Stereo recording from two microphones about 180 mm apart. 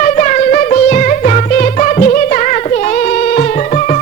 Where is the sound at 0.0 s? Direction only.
45° left (ahead or behind).